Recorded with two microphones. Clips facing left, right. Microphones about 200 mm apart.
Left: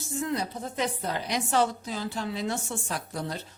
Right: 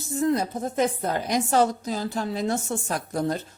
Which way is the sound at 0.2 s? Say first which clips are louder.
Right 7 dB; 45° right (ahead or behind).